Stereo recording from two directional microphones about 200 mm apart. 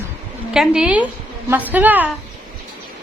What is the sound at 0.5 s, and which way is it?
A woman's voice, 5° right (ahead or behind).